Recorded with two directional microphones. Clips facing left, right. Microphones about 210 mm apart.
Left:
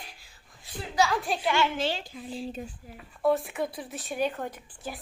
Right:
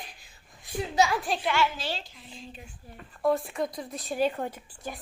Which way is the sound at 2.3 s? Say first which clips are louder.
Left 10 dB; 35° left (ahead or behind).